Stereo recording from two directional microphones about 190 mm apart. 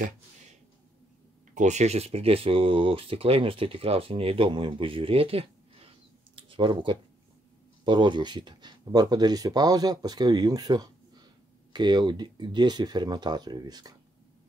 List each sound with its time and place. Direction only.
1.5 s speech: 40° right (ahead or behind)
6.3 s a sound: 25° right (ahead or behind)
7.8 s speech: 25° right (ahead or behind)